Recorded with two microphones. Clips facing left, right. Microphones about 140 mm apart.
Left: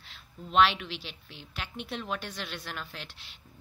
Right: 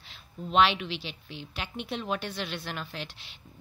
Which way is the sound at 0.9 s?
90° right.